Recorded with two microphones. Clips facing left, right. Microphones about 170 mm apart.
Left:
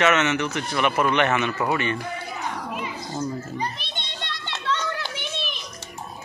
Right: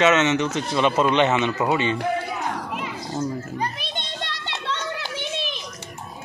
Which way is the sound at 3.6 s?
45° right (ahead or behind).